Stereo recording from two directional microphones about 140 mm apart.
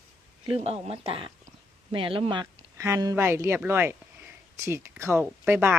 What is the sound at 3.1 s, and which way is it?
Speech, 15° right (ahead or behind).